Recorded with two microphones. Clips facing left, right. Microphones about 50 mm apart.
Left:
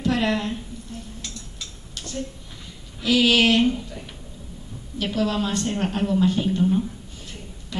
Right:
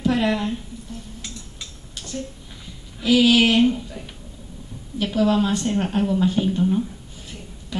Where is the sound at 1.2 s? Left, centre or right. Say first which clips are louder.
Even; centre.